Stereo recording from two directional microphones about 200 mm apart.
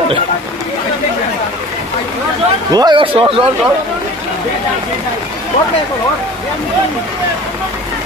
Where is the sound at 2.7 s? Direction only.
20° right (ahead or behind).